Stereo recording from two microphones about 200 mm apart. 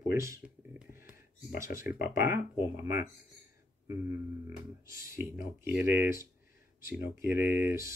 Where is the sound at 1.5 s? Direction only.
40° left (ahead or behind).